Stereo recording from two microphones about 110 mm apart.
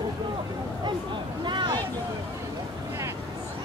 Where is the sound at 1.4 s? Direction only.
45° right (ahead or behind).